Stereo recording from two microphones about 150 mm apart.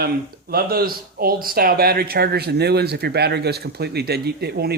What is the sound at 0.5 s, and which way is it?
Speech, 85° right.